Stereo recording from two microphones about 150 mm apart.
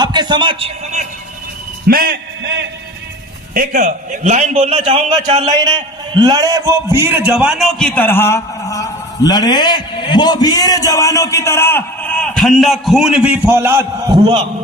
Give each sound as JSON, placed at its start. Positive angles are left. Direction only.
{"t": 0.0, "sound": "a sound", "side_deg": -30}
{"t": 1.9, "sound": "a man's voice", "side_deg": -75}
{"t": 3.5, "sound": "a man's voice", "side_deg": -65}
{"t": 5.5, "sound": "a man's voice", "side_deg": -30}